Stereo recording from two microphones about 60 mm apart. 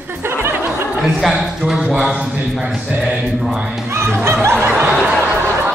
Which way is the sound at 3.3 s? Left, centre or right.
Centre.